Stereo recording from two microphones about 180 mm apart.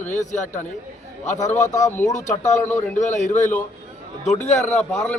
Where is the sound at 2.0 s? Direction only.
45° left (ahead or behind).